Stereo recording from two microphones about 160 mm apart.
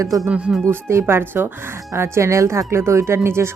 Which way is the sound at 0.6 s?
15° right (ahead or behind).